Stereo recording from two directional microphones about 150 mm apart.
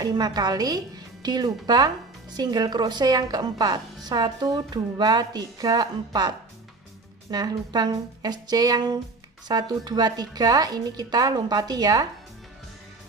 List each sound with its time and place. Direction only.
0.0 s a woman's voice: 25° right (ahead or behind)